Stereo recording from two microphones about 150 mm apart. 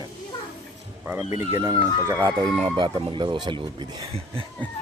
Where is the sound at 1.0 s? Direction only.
10° right (ahead or behind).